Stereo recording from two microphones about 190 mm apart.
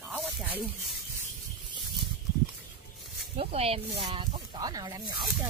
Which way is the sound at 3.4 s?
30° right (ahead or behind).